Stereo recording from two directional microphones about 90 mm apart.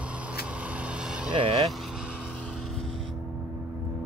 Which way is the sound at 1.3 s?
70° right (ahead or behind).